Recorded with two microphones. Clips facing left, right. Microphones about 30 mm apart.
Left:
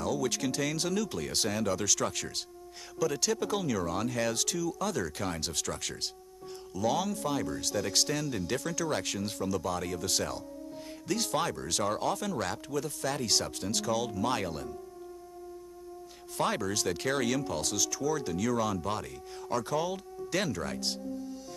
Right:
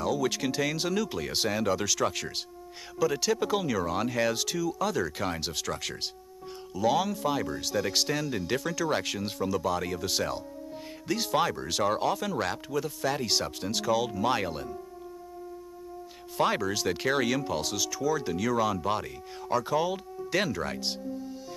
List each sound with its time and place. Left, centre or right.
0.0 s speech: centre
16.3 s speech: centre